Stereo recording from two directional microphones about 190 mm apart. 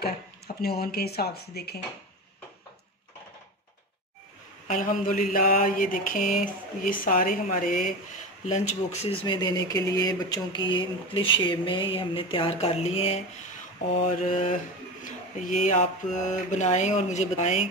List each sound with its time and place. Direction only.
0.6 s speech: 55° left (ahead or behind)
4.6 s mantra: 45° left (ahead or behind)
8.5 s speech: 35° left (ahead or behind)
9.2 s speech: 20° left (ahead or behind)
14.2 s speech: 40° left (ahead or behind)